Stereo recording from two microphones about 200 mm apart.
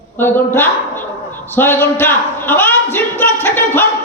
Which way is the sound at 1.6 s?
10° left (ahead or behind).